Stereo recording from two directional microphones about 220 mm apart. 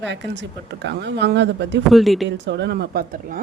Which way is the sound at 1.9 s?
Centre (ahead or behind).